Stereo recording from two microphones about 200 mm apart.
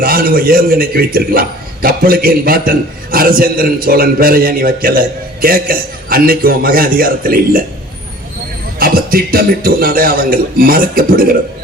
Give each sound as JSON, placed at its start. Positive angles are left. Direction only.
{"t": 0.0, "sound": "a man's voice", "side_deg": -45}
{"t": 8.8, "sound": "a man's voice", "side_deg": -45}